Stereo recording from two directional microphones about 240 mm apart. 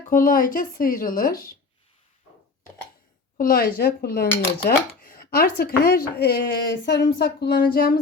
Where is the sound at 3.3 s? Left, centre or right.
Left.